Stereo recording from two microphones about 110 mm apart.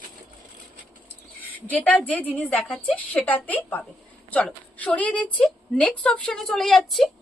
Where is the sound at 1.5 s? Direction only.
15° left (ahead or behind).